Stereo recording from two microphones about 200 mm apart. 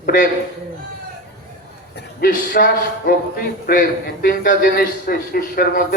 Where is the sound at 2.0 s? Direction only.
55° left (ahead or behind).